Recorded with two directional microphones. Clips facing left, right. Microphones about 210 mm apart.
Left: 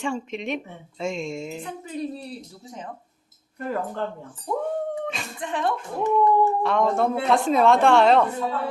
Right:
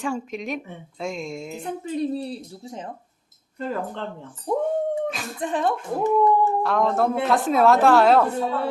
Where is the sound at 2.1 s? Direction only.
25° right (ahead or behind).